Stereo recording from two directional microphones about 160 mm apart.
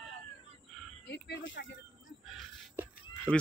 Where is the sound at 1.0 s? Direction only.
90° left.